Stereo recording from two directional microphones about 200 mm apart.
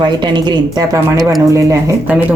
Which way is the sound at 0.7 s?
20° right (ahead or behind).